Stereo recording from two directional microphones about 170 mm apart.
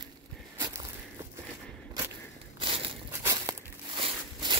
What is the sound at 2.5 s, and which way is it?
Walk, 30° right (ahead or behind).